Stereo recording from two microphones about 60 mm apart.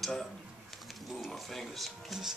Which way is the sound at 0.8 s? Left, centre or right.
Centre.